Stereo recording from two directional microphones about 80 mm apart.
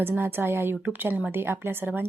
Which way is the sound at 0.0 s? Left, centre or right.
Right.